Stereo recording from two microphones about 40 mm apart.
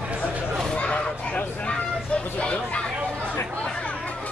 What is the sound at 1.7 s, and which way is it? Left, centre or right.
Vehicle, centre.